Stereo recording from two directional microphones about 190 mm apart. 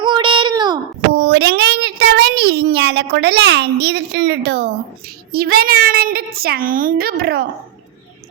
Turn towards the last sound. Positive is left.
turn(degrees=-55)  # may be behind; listen again after turning